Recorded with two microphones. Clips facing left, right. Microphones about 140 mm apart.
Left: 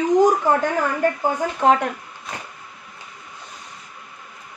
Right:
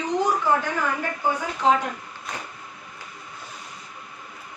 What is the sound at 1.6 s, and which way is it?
Speech, 55° left (ahead or behind).